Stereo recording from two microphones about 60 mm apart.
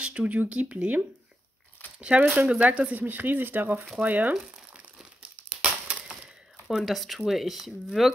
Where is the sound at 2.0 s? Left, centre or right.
Centre.